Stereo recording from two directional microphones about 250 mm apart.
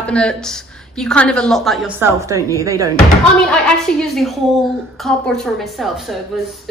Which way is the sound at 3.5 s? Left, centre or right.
Centre.